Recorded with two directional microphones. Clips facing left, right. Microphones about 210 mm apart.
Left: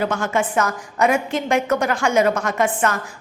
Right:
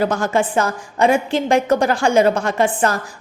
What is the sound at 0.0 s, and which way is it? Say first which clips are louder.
A woman's voice: right 3 dB; 35° right (ahead or behind).